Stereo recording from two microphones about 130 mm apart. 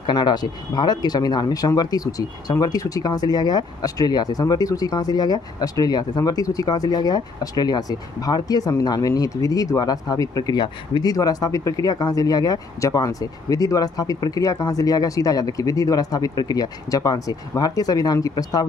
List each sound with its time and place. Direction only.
0.0 s speech: 35° left (ahead or behind)